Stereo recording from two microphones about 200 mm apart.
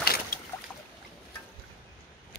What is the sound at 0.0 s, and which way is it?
Boat, 50° left (ahead or behind).